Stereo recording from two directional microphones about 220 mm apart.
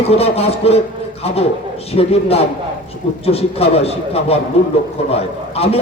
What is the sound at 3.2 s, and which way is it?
A man's voice, 25° left (ahead or behind).